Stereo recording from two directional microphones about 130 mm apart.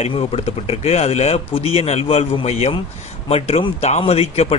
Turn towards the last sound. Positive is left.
turn(degrees=50)  # may be behind; listen again after turning